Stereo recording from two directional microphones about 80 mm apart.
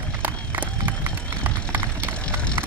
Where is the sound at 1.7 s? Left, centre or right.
Right.